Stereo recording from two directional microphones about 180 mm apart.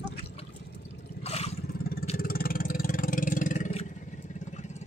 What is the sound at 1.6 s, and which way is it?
Vehicle, 55° left (ahead or behind).